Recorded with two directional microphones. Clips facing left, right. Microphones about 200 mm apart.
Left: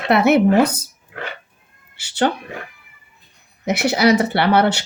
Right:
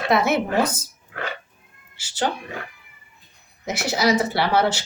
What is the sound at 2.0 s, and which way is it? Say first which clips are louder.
Speech: left 6 dB; 65° left (ahead or behind).